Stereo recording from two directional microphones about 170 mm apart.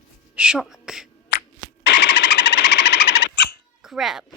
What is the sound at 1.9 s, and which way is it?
Engine, 90° left.